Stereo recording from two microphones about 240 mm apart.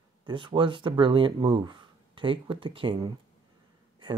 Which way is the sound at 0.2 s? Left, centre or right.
Centre.